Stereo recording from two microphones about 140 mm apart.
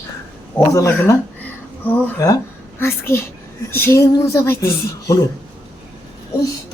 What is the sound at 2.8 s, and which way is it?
Speech, 15° left (ahead or behind).